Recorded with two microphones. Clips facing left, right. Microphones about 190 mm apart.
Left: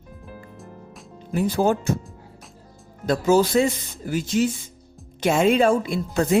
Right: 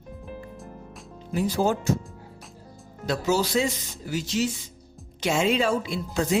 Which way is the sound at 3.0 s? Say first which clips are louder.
Left 6 dB; 50° left (ahead or behind).